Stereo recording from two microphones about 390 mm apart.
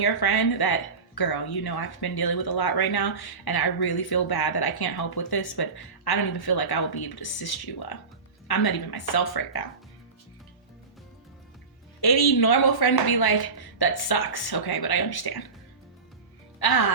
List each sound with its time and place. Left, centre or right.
0.0 s speech: left
11.9 s speech: left
16.6 s speech: left